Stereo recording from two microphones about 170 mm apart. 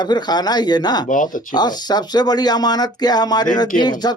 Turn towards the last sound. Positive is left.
turn(degrees=25)  # may be behind; listen again after turning